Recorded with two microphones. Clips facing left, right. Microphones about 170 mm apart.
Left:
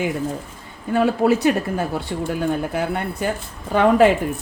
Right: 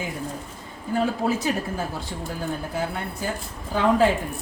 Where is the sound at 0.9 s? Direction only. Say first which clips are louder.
Left 6 dB; 70° left (ahead or behind).